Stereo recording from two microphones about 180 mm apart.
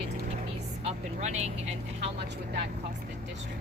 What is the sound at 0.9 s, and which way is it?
Vehicle, 40° right (ahead or behind).